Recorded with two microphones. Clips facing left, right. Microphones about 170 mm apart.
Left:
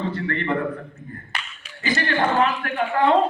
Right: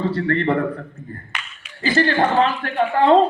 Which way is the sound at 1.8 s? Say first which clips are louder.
Right 5 dB; 30° right (ahead or behind).